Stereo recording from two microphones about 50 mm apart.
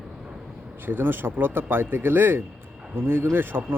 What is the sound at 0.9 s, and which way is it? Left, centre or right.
A man's voice, right.